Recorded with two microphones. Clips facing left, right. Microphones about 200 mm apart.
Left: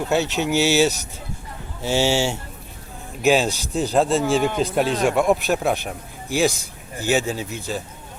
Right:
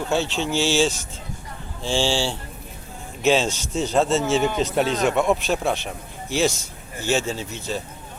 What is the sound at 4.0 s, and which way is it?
Speech, centre (ahead or behind).